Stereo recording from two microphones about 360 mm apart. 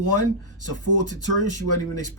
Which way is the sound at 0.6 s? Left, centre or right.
Left.